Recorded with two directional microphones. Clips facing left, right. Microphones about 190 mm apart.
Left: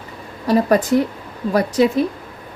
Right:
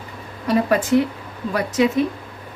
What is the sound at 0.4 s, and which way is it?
Speech, 40° left (ahead or behind).